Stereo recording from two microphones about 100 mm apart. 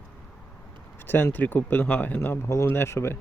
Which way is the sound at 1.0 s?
20° left (ahead or behind).